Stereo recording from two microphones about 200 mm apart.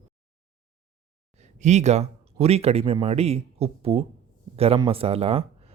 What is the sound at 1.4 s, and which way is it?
A man's voice, 35° right (ahead or behind).